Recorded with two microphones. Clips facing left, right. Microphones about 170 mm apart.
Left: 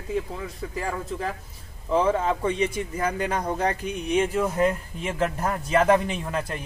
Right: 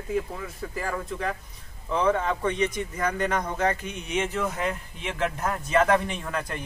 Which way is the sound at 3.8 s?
35° left (ahead or behind).